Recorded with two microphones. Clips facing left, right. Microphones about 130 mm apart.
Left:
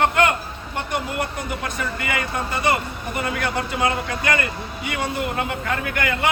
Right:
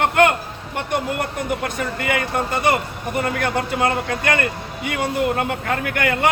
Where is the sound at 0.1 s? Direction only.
55° right (ahead or behind).